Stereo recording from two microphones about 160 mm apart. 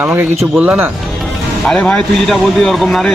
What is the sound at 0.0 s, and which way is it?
Speech, 15° right (ahead or behind).